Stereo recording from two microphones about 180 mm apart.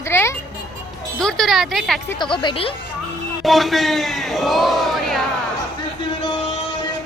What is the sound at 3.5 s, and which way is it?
A man's voice, centre (ahead or behind).